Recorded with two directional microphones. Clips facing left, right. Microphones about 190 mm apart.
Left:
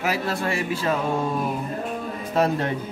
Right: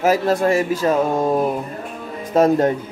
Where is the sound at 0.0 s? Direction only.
45° right (ahead or behind).